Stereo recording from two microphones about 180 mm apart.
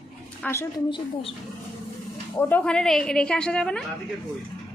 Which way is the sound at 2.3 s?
10° left (ahead or behind).